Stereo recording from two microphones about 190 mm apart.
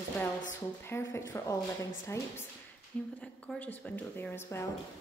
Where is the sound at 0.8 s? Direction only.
15° left (ahead or behind).